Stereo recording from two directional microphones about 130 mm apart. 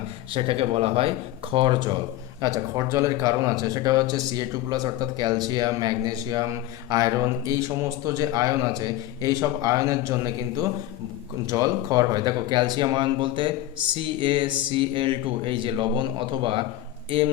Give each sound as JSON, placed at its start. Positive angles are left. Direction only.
{"t": 0.3, "sound": "speech", "side_deg": -45}
{"t": 11.5, "sound": "speech", "side_deg": -30}